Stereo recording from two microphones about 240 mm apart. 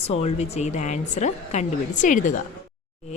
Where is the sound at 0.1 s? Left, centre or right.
Left.